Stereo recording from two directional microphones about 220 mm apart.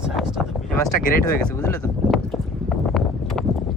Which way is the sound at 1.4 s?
10° left (ahead or behind).